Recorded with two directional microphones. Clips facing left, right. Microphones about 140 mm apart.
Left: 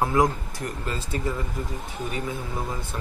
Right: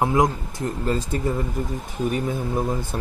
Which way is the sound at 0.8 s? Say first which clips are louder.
Right 8 dB; 40° right (ahead or behind).